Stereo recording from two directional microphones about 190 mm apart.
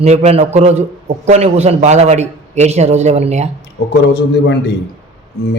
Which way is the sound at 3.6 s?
60° left (ahead or behind).